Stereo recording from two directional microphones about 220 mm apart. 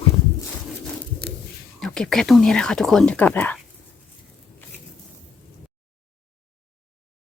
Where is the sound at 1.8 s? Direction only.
5° left (ahead or behind).